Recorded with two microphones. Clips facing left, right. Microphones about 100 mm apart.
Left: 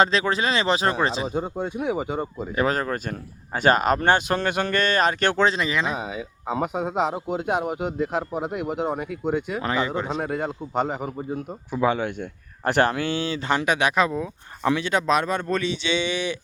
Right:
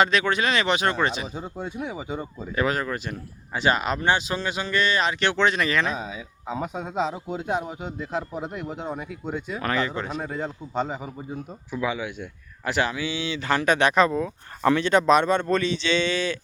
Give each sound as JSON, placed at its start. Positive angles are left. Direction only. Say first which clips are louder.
{"t": 0.0, "sound": "speech", "louder": "left 1 dB", "side_deg": 30}
{"t": 1.3, "sound": "speech", "louder": "left 6 dB", "side_deg": 55}
{"t": 2.6, "sound": "speech", "louder": "left 2 dB", "side_deg": 40}
{"t": 5.5, "sound": "speech", "louder": "even", "side_deg": 20}
{"t": 6.9, "sound": "speech", "louder": "left 3 dB", "side_deg": 55}
{"t": 9.6, "sound": "speech", "louder": "left 2 dB", "side_deg": 15}
{"t": 10.2, "sound": "speech", "louder": "left 4 dB", "side_deg": 65}
{"t": 13.5, "sound": "speech", "louder": "right 1 dB", "side_deg": 20}
{"t": 13.7, "sound": "speech", "louder": "right 2 dB", "side_deg": 5}